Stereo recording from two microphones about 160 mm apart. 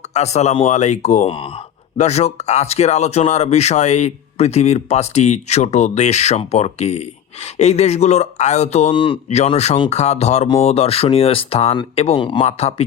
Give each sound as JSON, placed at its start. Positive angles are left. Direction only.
{"t": 0.1, "sound": "speech", "side_deg": 45}
{"t": 8.9, "sound": "speech", "side_deg": 30}